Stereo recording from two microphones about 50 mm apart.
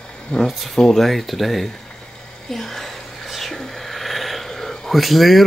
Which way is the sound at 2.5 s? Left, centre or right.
Centre.